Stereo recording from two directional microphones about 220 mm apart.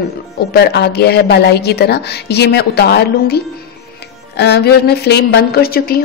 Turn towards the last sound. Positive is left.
turn(degrees=45)  # may be behind; listen again after turning